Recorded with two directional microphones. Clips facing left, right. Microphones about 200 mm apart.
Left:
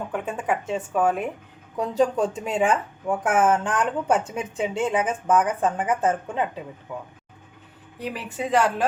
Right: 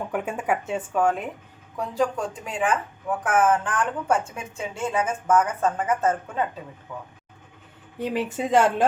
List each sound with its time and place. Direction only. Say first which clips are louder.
0.1 s speech: right 1 dB; 10° right (ahead or behind)
0.9 s speech: left 1 dB; 5° left (ahead or behind)
1.7 s a woman's voice: left 3 dB; 20° left (ahead or behind)
8.0 s speech: right 4 dB; 25° right (ahead or behind)